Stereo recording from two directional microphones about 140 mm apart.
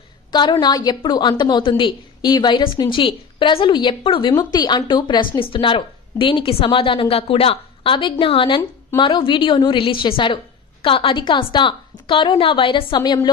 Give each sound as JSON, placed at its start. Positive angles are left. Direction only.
{"t": 0.3, "sound": "a woman's voice", "side_deg": 30}